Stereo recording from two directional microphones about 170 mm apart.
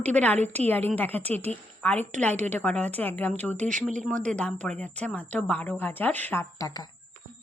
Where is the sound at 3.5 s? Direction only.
45° right (ahead or behind).